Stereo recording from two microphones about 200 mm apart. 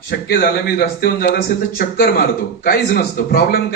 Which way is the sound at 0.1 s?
50° left (ahead or behind).